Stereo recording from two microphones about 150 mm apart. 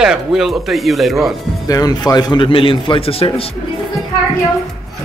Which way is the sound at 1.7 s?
25° left (ahead or behind).